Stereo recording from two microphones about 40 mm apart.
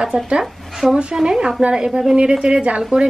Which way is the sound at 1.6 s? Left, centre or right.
Right.